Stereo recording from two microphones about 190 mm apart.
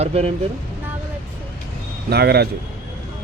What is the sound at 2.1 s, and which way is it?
Speech, 55° right (ahead or behind).